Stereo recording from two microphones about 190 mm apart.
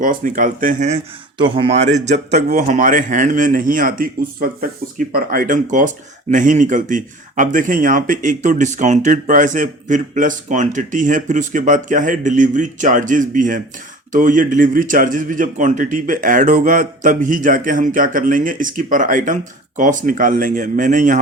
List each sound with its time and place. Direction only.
0.0 s a man's voice: 45° right (ahead or behind)